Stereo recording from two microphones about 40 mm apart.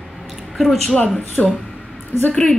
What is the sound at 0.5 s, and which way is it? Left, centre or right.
Speech, centre.